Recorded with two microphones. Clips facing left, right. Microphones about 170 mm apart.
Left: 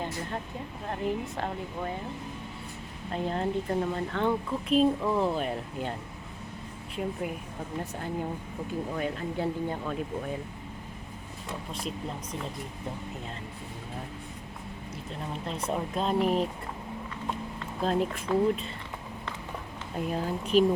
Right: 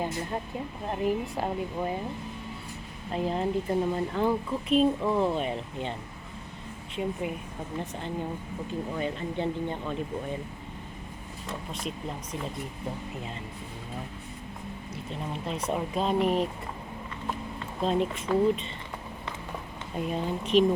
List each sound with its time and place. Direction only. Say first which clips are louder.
0.9 s speech: right 3 dB; 15° right (ahead or behind)
3.1 s speech: right 2 dB; 5° right (ahead or behind)
6.9 s speech: right 1 dB; centre (ahead or behind)
11.7 s speech: even; centre (ahead or behind)
15.1 s speech: right 2 dB; centre (ahead or behind)
17.7 s speech: right 1 dB; centre (ahead or behind)
20.0 s speech: right 1 dB; centre (ahead or behind)